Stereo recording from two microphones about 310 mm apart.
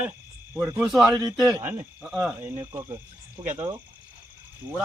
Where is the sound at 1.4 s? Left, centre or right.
Centre.